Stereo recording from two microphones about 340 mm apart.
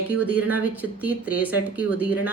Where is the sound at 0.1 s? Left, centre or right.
Centre.